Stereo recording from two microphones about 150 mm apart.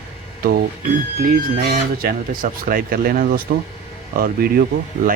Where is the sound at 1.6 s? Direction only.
85° right.